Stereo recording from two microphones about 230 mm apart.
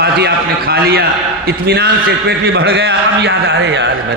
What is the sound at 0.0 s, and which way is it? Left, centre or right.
A man's voice, right.